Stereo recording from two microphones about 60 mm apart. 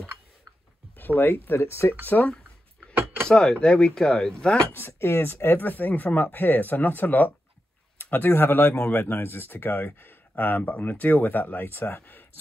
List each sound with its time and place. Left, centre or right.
0.9 s speech: left
2.9 s cutlery: right
3.3 s speech: centre
4.7 s speech: left